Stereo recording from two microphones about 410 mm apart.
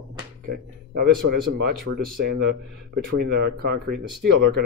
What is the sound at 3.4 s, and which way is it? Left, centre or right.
Speech, right.